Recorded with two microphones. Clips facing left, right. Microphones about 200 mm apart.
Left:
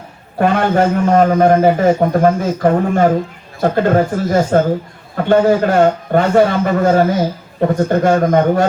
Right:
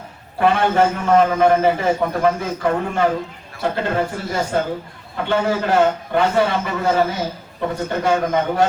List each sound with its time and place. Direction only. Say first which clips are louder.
0.3 s a man's voice: left 3 dB; 45° left (ahead or behind)